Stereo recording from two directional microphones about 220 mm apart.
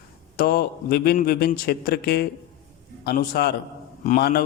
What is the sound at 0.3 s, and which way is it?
A man's voice, 45° left (ahead or behind).